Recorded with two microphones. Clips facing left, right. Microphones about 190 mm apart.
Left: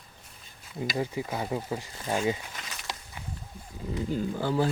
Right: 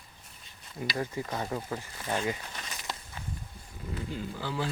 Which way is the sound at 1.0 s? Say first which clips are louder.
Left 2 dB; 10° left (ahead or behind).